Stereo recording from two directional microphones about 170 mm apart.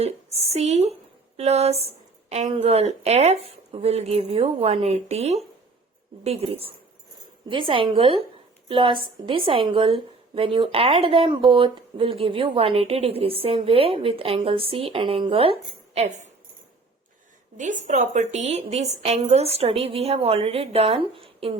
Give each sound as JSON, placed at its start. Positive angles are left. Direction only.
{"t": 0.0, "sound": "a woman's voice", "side_deg": -40}
{"t": 16.0, "sound": "speech", "side_deg": -45}
{"t": 17.6, "sound": "a woman's voice", "side_deg": -45}